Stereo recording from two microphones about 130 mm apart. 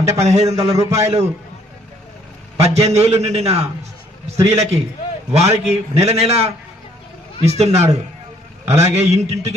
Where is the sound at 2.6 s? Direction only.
55° right (ahead or behind).